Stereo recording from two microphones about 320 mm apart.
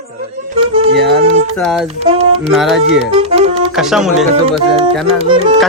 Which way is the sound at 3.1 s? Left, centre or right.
Centre.